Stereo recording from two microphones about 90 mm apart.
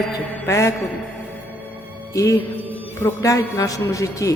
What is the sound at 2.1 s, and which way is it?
Speech, 40° left (ahead or behind).